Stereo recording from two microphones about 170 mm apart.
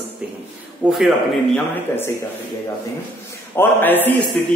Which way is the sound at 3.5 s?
10° left (ahead or behind).